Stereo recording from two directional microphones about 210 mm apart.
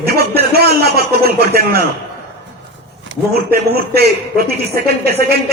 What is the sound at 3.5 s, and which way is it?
Speech, 45° right (ahead or behind).